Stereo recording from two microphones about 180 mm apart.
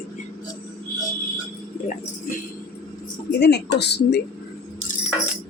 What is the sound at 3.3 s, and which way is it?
Speech, 65° left (ahead or behind).